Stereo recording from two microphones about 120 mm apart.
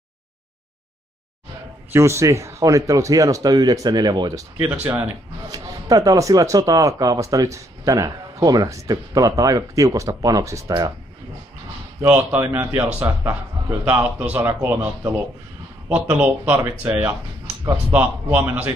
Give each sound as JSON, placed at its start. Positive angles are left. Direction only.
{"t": 1.9, "sound": "speech", "side_deg": -20}
{"t": 4.8, "sound": "speech", "side_deg": -20}
{"t": 5.5, "sound": "speech", "side_deg": -30}
{"t": 12.0, "sound": "a man's voice", "side_deg": -20}